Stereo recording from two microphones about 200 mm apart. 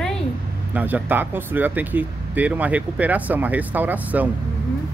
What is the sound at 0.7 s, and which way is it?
Speech, 10° right (ahead or behind).